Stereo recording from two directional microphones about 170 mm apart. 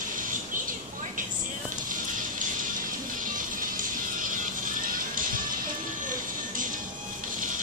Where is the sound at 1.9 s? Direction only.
55° right (ahead or behind).